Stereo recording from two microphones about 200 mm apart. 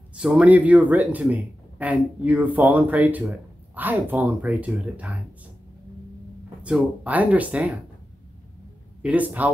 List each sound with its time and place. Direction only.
0.1 s speech: 5° right (ahead or behind)
6.6 s speech: 5° right (ahead or behind)
9.0 s speech: 5° right (ahead or behind)